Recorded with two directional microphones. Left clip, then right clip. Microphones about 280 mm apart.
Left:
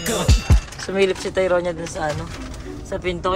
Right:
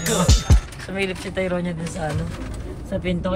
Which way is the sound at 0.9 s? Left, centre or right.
Centre.